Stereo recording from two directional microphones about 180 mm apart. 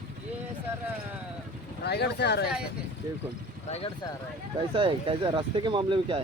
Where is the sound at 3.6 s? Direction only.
35° left (ahead or behind).